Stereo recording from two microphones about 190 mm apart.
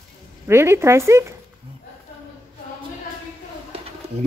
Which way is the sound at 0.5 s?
15° right (ahead or behind).